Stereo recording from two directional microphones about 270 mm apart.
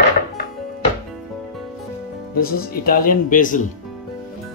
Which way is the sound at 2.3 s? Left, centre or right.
Left.